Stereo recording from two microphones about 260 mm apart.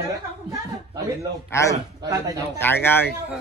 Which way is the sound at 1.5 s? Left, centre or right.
Centre.